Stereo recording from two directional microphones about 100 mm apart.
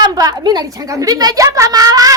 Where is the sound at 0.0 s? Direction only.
40° right (ahead or behind).